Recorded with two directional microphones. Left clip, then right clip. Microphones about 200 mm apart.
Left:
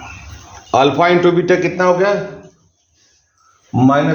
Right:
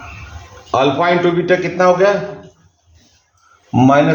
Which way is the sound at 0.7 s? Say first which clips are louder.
Left 2 dB; 50° left (ahead or behind).